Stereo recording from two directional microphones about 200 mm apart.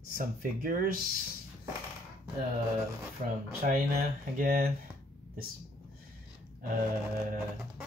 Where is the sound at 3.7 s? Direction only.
45° right (ahead or behind).